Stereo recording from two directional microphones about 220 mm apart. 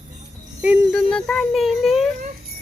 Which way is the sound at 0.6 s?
5° right (ahead or behind).